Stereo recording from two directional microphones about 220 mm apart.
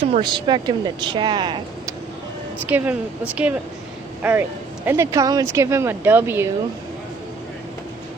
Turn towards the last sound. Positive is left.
turn(degrees=-10)  # may be behind; listen again after turning